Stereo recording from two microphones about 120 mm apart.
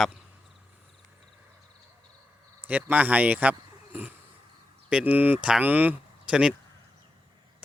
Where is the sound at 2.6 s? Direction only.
15° right (ahead or behind).